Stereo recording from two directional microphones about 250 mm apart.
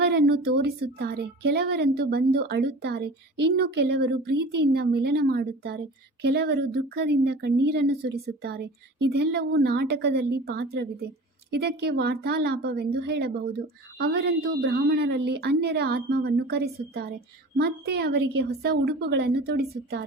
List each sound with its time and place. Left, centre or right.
0.0 s a woman's voice: right